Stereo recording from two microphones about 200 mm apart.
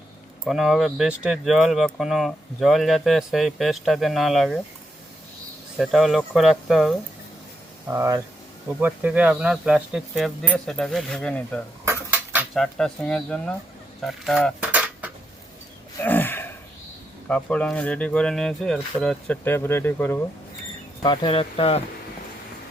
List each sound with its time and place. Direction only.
0.4 s speech: centre (ahead or behind)
5.7 s speech: centre (ahead or behind)
7.9 s speech: 15° right (ahead or behind); by 11.6 s 5° left (ahead or behind)
11.9 s cutlery: 10° right (ahead or behind)
12.6 s speech: 5° left (ahead or behind)
14.0 s cutlery: centre (ahead or behind)
16.0 s a sound: 10° left (ahead or behind)
17.2 s speech: 5° left (ahead or behind)
21.0 s speech: 20° left (ahead or behind)